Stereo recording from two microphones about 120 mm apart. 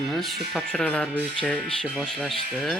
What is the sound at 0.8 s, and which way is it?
Speech, 10° left (ahead or behind).